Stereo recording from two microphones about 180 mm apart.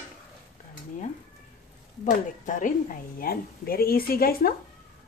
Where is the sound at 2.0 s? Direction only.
45° left (ahead or behind).